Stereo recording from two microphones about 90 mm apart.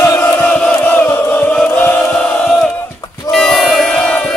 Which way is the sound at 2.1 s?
10° left (ahead or behind).